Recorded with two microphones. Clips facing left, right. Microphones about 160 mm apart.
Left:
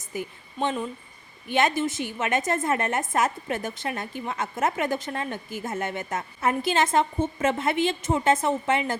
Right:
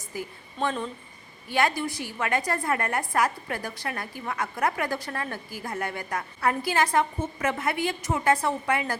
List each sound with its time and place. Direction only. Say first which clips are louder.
0.0 s a woman's voice: left 2 dB; 20° left (ahead or behind)